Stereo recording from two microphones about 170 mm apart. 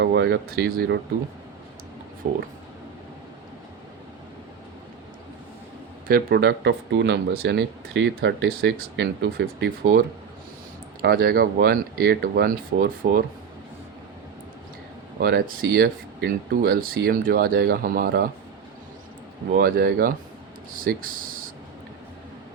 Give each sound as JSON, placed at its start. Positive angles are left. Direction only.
{"t": 0.0, "sound": "speech", "side_deg": -90}
{"t": 2.2, "sound": "speech", "side_deg": -50}
{"t": 6.1, "sound": "speech", "side_deg": -65}
{"t": 11.0, "sound": "speech", "side_deg": -65}
{"t": 15.2, "sound": "speech", "side_deg": -60}
{"t": 19.5, "sound": "speech", "side_deg": -60}